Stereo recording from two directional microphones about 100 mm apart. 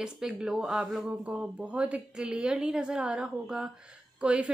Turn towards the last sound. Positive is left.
turn(degrees=-10)  # may be behind; listen again after turning